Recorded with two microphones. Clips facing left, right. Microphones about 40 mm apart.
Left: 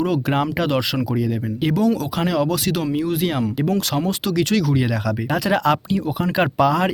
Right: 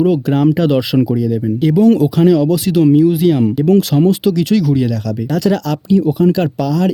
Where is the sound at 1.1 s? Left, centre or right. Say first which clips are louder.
Right 7 dB; centre.